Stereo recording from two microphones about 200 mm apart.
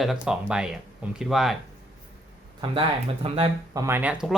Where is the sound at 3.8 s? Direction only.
10° right (ahead or behind).